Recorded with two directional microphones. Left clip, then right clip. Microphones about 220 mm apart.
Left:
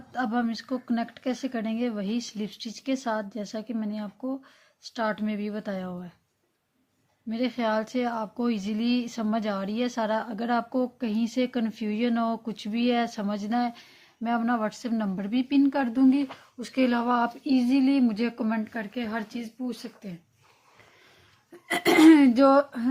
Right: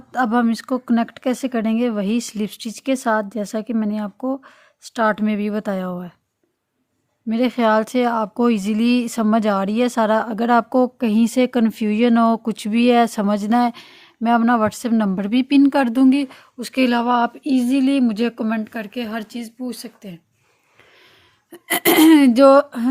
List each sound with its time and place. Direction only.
0.1 s speech: 50° right (ahead or behind)
7.3 s speech: 50° right (ahead or behind)
21.5 s speech: 45° right (ahead or behind)